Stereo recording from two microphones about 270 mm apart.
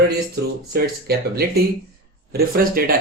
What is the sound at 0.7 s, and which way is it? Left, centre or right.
A man's voice, right.